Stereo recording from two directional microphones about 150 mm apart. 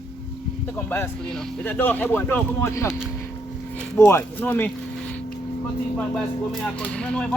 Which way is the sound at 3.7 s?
10° left (ahead or behind).